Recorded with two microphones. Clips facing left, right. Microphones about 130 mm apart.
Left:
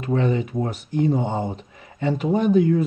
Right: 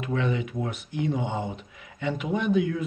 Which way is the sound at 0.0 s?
35° left (ahead or behind).